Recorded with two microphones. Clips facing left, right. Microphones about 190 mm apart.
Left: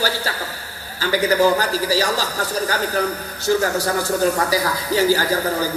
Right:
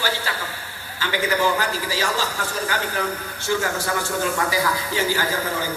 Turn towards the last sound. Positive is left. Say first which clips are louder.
# left 4 dB
turn(degrees=40)  # may be behind; listen again after turning